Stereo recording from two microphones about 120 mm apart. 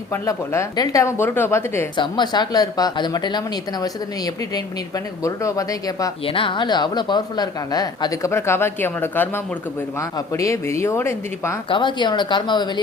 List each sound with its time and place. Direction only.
0.1 s a woman's voice: 25° left (ahead or behind)
2.0 s speech: 35° left (ahead or behind)
5.2 s a woman's voice: 25° left (ahead or behind)
6.2 s a woman's voice: 45° left (ahead or behind); by 11.5 s 20° left (ahead or behind)
11.7 s speech: 40° left (ahead or behind)